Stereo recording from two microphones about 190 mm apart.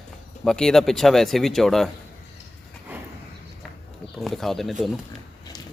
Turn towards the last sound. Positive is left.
turn(degrees=0)  # may be behind; listen again after turning